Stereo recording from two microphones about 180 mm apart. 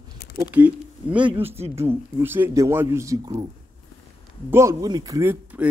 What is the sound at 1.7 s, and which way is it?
Speech, 15° right (ahead or behind).